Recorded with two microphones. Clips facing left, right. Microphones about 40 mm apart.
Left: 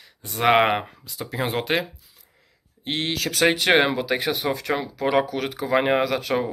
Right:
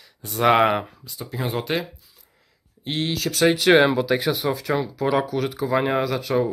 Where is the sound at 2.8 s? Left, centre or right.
Left.